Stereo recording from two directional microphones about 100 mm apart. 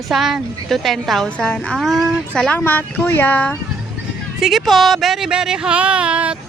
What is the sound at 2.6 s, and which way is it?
Speech, 20° left (ahead or behind).